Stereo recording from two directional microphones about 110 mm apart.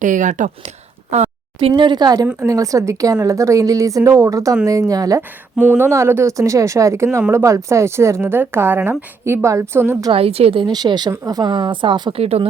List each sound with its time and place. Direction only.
1.1 s a woman's voice: 75° right (ahead or behind)
1.5 s a woman's voice: 50° right (ahead or behind); by 5.2 s 30° right (ahead or behind)
5.5 s speech: 20° right (ahead or behind)
10.1 s a woman's voice: 65° right (ahead or behind)
10.7 s a woman's voice: 40° right (ahead or behind)
12.1 s a woman's voice: 65° right (ahead or behind)